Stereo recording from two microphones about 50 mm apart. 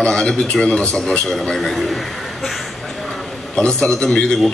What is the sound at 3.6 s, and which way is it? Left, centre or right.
Speech, centre.